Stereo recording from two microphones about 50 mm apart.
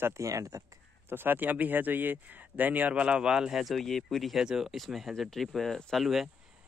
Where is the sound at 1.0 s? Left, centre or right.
Right.